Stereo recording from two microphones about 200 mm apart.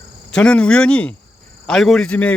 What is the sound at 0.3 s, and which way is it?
Speech, 5° left (ahead or behind).